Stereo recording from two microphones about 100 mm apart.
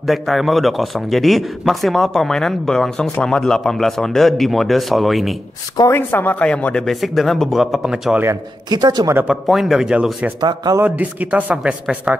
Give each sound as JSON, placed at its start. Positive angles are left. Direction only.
{"t": 0.0, "sound": "a man's voice", "side_deg": 0}
{"t": 5.9, "sound": "a man's voice", "side_deg": 20}
{"t": 8.6, "sound": "speech", "side_deg": -45}
{"t": 9.3, "sound": "a man's voice", "side_deg": 0}
{"t": 10.4, "sound": "speech", "side_deg": -45}
{"t": 10.8, "sound": "speech", "side_deg": -15}